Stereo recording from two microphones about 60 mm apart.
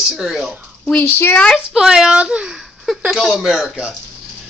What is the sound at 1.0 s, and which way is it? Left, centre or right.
Speech, left.